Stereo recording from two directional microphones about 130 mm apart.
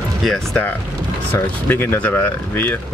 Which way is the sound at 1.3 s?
15° left (ahead or behind).